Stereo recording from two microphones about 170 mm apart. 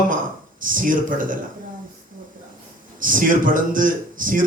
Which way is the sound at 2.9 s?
55° right (ahead or behind).